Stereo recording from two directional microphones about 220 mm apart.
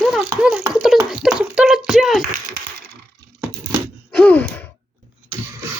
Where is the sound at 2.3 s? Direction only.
45° right (ahead or behind).